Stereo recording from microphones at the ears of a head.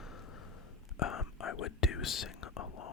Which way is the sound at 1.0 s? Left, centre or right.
Left.